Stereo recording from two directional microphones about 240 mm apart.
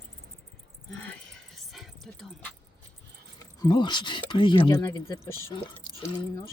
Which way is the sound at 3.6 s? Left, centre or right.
Centre.